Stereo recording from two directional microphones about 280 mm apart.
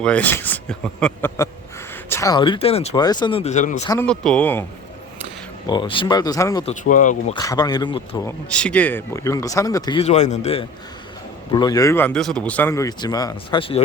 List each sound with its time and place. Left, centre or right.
0.0 s speech: centre; by 3.8 s left
3.8 s speech: centre
5.6 s speech: centre
6.8 s speech: left
7.3 s speech: centre
8.5 s speech: centre